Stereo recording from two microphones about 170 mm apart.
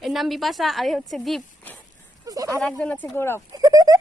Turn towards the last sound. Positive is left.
turn(degrees=-20)  # may be behind; listen again after turning